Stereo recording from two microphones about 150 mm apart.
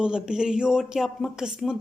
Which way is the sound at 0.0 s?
5° right (ahead or behind).